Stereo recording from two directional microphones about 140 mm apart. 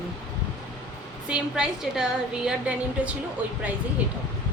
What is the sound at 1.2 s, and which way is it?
Speech, 5° right (ahead or behind).